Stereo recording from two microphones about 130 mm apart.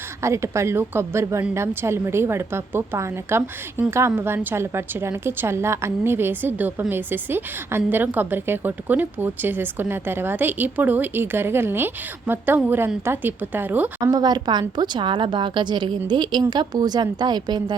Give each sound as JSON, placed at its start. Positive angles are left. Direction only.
{"t": 0.2, "sound": "a woman's voice", "side_deg": -20}
{"t": 14.0, "sound": "a woman's voice", "side_deg": -30}